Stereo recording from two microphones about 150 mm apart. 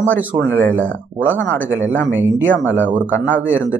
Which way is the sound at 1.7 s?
15° right (ahead or behind).